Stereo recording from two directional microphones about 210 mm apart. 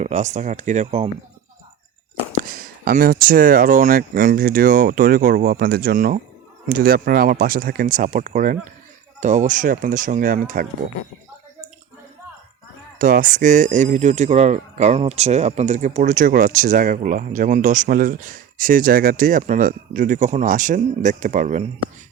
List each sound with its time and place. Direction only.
0.0 s speech: 35° right (ahead or behind)
2.4 s speech: 40° right (ahead or behind)
13.0 s speech: 40° right (ahead or behind)